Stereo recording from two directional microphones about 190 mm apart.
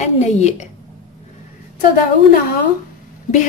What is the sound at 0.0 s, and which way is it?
Speech, 35° left (ahead or behind).